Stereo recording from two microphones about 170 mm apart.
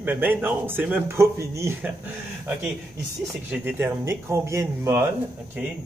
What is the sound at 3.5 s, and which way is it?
A man's voice, 10° right (ahead or behind).